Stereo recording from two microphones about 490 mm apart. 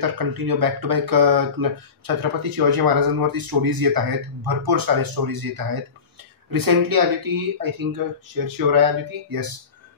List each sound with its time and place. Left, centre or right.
0.0 s speech: right